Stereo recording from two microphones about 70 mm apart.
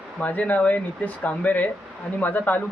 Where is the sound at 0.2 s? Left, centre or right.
Left.